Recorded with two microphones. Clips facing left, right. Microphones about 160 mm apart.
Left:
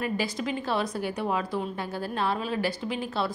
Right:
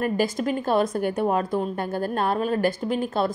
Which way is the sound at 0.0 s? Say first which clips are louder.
Right 6 dB; 50° right (ahead or behind).